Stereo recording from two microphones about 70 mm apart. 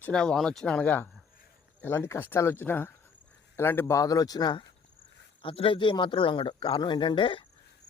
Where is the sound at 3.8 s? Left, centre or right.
Left.